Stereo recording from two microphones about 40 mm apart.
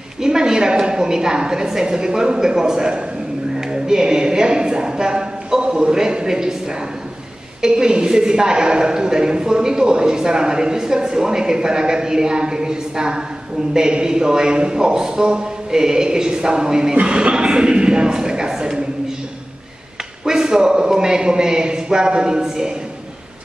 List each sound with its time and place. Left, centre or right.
0.2 s a woman's voice: centre
3.5 s a sound: centre
5.8 s a woman's voice: centre
7.6 s a woman's voice: centre
20.2 s a woman's voice: centre